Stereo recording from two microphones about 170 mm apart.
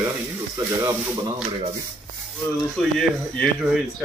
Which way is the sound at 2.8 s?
Centre (ahead or behind).